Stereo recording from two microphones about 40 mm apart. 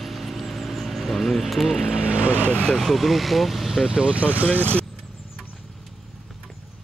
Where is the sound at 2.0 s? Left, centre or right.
Right.